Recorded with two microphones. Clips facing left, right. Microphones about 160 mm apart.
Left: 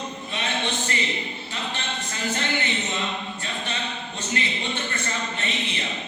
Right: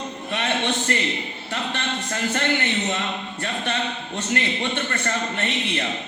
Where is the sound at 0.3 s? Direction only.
65° right (ahead or behind).